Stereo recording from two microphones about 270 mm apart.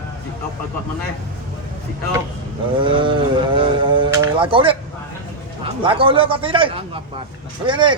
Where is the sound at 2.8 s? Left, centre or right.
Centre.